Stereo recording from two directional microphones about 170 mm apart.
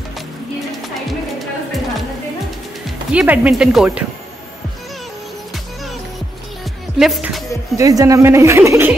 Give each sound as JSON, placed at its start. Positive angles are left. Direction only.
{"t": 1.0, "sound": "music", "side_deg": 0}
{"t": 3.1, "sound": "speech", "side_deg": -5}
{"t": 7.0, "sound": "speech", "side_deg": 0}
{"t": 7.7, "sound": "a woman's voice", "side_deg": -20}